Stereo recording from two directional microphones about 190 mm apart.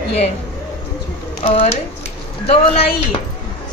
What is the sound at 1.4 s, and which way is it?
Speech, 30° left (ahead or behind).